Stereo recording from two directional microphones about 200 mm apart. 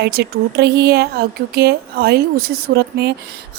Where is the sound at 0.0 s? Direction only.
55° right (ahead or behind).